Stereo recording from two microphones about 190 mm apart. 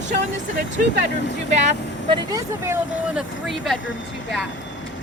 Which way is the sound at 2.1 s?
15° right (ahead or behind).